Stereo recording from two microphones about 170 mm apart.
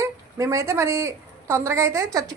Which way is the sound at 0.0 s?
20° right (ahead or behind).